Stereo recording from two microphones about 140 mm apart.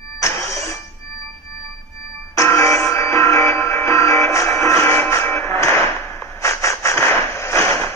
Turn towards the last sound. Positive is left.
turn(degrees=20)  # may be behind; listen again after turning